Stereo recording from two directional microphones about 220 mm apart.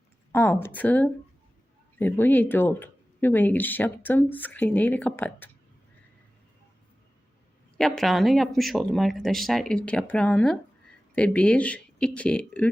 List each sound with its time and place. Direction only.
0.3 s speech: 10° left (ahead or behind)
7.8 s speech: centre (ahead or behind)